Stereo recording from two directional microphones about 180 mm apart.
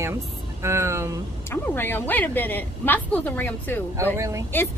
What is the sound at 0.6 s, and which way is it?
Speech, 15° right (ahead or behind).